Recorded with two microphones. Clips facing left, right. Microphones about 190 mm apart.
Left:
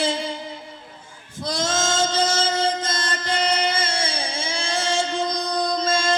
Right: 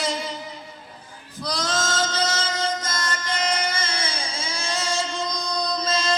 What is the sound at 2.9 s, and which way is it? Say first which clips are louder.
Music: left 3 dB; 30° left (ahead or behind).